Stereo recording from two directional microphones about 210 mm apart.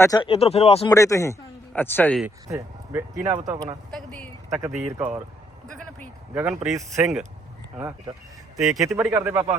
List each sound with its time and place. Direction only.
0.0 s speech: 20° left (ahead or behind)
0.9 s speech: 15° left (ahead or behind)
2.2 s speech: 15° right (ahead or behind)
3.9 s speech: 5° left (ahead or behind)
4.4 s speech: 15° right (ahead or behind)
6.3 s speech: 5° right (ahead or behind)
8.5 s speech: centre (ahead or behind)
9.0 s speech: 10° right (ahead or behind)